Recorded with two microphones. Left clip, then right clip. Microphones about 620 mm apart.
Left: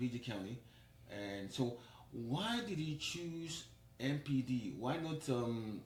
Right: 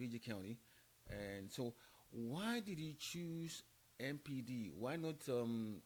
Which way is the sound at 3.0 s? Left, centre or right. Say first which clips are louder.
Left 6 dB; right.